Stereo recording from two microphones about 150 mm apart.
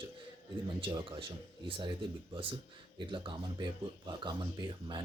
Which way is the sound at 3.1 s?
30° right (ahead or behind).